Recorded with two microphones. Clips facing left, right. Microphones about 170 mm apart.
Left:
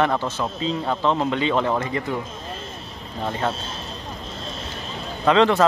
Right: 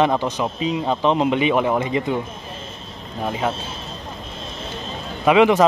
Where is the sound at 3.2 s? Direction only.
10° right (ahead or behind).